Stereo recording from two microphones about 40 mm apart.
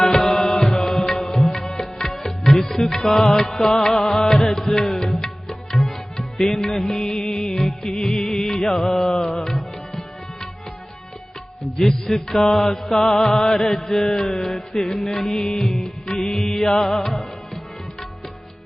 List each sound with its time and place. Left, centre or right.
0.0 s music: centre
9.0 s mantra: centre
9.2 s mantra: centre
11.8 s mantra: centre
15.0 s music: centre